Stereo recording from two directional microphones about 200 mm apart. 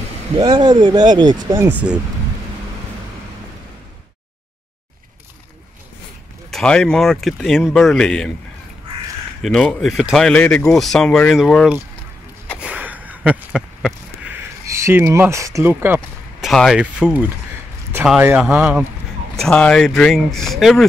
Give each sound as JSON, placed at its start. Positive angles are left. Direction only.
{"t": 0.4, "sound": "speech", "side_deg": -20}
{"t": 6.5, "sound": "speech", "side_deg": 5}
{"t": 9.4, "sound": "speech", "side_deg": 5}
{"t": 12.5, "sound": "a sound", "side_deg": -5}
{"t": 14.7, "sound": "speech", "side_deg": -15}